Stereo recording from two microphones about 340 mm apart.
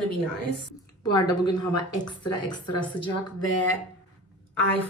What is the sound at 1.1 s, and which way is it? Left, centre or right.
Speech, centre.